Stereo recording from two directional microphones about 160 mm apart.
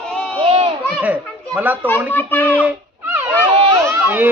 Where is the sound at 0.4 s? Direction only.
35° right (ahead or behind).